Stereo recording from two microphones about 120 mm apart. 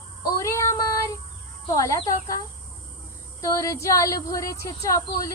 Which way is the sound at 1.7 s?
30° left (ahead or behind).